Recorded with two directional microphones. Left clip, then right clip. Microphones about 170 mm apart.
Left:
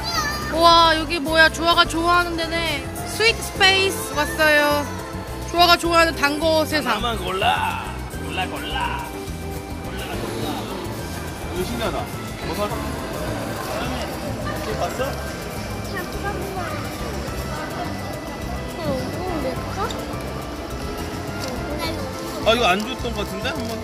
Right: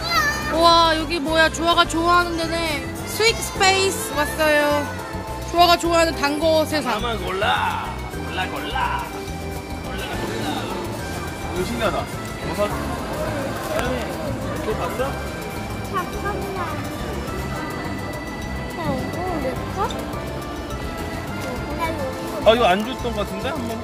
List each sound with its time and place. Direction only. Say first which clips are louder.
0.1 s speech: right 4 dB; 5° right (ahead or behind)
7.1 s speech: left 1 dB; 70° left (ahead or behind)
22.4 s speech: right 2 dB; 35° right (ahead or behind)